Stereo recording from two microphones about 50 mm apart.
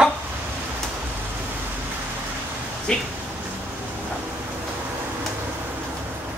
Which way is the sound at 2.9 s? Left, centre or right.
Centre.